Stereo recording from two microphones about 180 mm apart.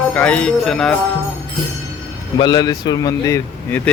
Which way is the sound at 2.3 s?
25° left (ahead or behind).